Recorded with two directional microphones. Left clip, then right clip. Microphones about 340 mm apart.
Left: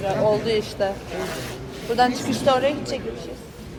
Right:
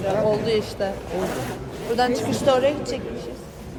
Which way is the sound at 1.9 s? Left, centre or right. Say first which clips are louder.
Left 1 dB; centre.